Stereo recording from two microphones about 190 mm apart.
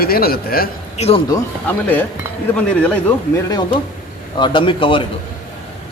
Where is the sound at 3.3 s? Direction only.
20° left (ahead or behind).